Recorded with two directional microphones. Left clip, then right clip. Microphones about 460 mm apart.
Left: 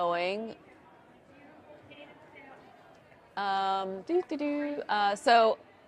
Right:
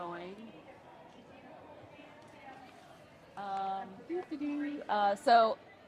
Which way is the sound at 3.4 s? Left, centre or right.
Left.